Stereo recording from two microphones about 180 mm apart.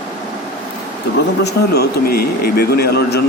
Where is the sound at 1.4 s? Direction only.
60° left (ahead or behind).